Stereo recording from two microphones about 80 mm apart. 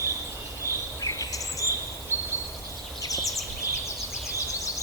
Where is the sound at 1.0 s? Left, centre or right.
Left.